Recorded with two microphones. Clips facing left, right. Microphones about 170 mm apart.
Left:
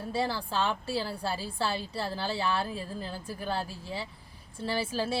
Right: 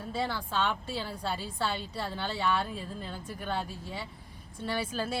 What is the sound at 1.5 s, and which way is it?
Speech, 30° left (ahead or behind).